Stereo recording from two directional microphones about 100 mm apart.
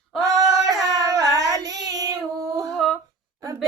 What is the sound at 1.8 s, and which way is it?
Female singing, 40° right (ahead or behind).